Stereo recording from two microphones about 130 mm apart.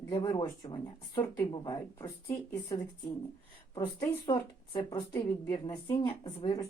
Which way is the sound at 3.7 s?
25° left (ahead or behind).